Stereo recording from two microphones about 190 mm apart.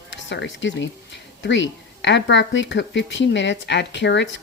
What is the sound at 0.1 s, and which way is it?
Speech, 70° left (ahead or behind).